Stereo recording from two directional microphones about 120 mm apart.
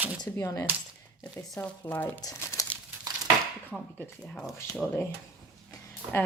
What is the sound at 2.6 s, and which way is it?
Crumpling, 25° left (ahead or behind).